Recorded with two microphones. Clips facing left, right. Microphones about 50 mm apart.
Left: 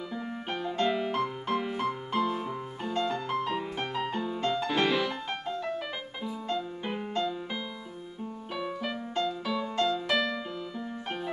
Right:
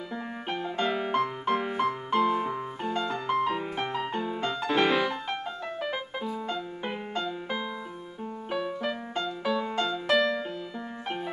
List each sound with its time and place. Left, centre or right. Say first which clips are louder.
0.5 s music: even; centre
3.0 s music: right 2 dB; centre
7.2 s music: right 1 dB; centre